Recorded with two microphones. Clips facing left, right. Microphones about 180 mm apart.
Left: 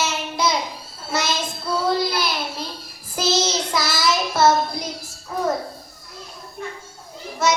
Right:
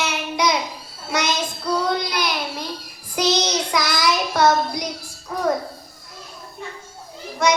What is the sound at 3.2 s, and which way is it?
Child singing, 5° left (ahead or behind).